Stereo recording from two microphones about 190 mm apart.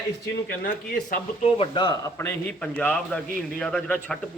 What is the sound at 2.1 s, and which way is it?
A man's voice, 10° left (ahead or behind).